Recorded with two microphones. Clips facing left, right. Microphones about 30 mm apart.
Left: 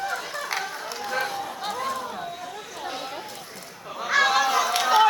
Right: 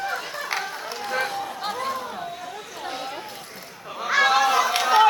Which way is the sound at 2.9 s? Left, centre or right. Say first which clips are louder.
Right 2 dB; centre.